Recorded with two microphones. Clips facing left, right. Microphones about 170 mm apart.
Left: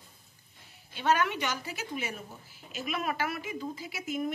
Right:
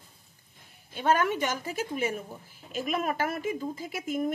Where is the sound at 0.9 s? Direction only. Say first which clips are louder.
Right 2 dB; 45° right (ahead or behind).